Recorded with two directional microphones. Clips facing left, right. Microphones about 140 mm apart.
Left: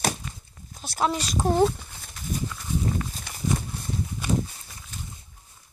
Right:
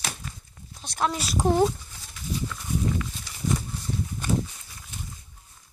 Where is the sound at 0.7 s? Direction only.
5° left (ahead or behind).